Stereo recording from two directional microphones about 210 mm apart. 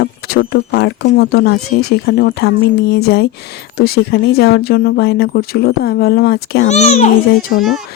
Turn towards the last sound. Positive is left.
turn(degrees=0)  # may be behind; listen again after turning